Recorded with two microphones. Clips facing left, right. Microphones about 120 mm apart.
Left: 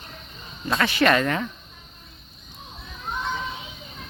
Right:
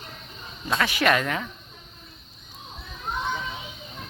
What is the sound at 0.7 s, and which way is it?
Speech, 5° right (ahead or behind).